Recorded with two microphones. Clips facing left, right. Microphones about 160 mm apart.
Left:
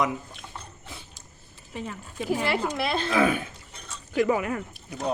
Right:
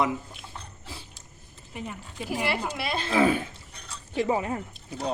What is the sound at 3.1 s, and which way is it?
Speech, 30° right (ahead or behind).